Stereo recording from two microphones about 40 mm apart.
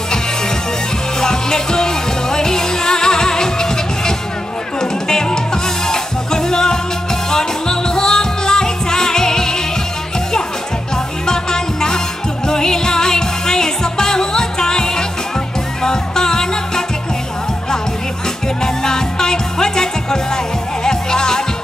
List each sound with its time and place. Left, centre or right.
1.2 s music: centre
11.2 s music: centre
18.6 s music: centre